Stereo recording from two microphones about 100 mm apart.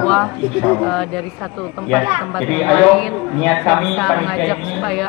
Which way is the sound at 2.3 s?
5° left (ahead or behind).